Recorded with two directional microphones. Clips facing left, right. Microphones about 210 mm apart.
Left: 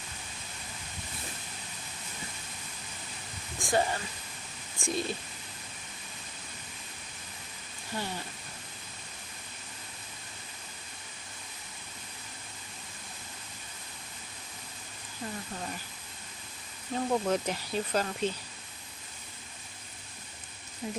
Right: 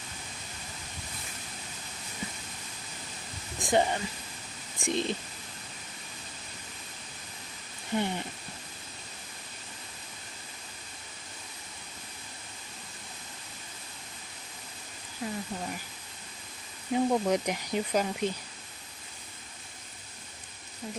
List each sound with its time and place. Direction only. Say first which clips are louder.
3.6 s speech: right 3 dB; 20° right (ahead or behind)
7.9 s speech: right 7 dB; 20° right (ahead or behind)
15.2 s speech: right 4 dB; 10° right (ahead or behind)
16.9 s speech: right 3 dB; 15° right (ahead or behind)
20.8 s speech: left 3 dB; 10° left (ahead or behind)